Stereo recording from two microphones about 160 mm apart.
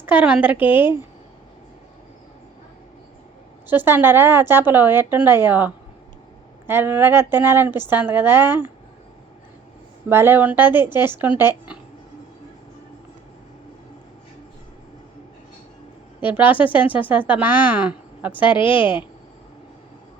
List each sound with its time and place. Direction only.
0.0 s a woman's voice: 10° right (ahead or behind)
3.7 s a woman's voice: 10° right (ahead or behind)
10.1 s a woman's voice: 15° right (ahead or behind)
16.3 s a woman's voice: 10° right (ahead or behind)
18.4 s a woman's voice: 30° left (ahead or behind)